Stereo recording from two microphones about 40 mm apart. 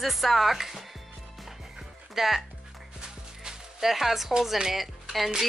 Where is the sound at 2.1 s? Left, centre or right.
Centre.